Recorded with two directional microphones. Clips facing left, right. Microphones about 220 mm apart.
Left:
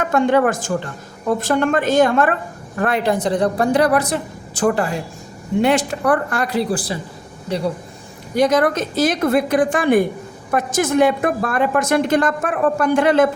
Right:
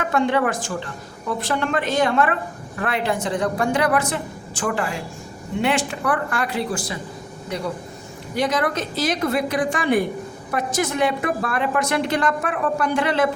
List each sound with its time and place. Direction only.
0.1 s a woman's voice: 45° left (ahead or behind)
8.4 s a woman's voice: 45° left (ahead or behind)